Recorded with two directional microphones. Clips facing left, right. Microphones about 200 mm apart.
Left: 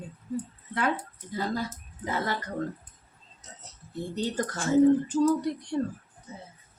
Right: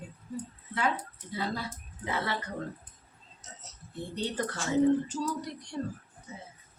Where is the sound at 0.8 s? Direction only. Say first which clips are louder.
Left 2 dB; 50° left (ahead or behind).